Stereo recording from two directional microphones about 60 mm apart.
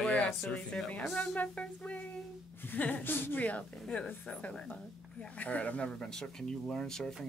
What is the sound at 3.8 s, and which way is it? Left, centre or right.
Speech, centre.